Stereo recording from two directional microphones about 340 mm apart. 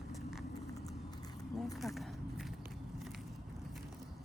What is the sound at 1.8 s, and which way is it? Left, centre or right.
Speech, centre.